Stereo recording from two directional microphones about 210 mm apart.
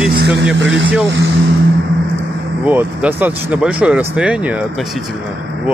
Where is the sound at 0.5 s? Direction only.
60° right (ahead or behind).